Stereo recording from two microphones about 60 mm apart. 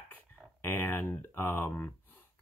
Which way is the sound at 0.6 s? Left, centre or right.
Left.